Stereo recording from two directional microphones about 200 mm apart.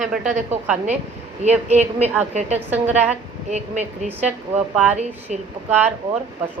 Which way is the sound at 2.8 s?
10° right (ahead or behind).